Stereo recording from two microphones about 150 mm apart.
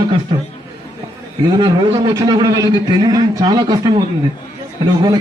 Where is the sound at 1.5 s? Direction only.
30° right (ahead or behind).